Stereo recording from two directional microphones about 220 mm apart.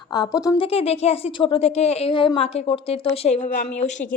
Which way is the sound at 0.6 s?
25° left (ahead or behind).